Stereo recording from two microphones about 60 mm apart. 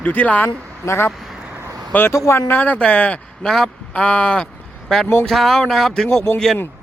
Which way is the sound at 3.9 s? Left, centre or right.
Centre.